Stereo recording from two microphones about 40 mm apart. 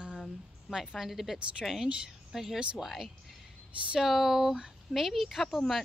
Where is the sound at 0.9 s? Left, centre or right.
Centre.